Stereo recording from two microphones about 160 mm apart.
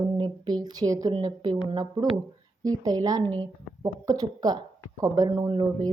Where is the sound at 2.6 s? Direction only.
25° right (ahead or behind).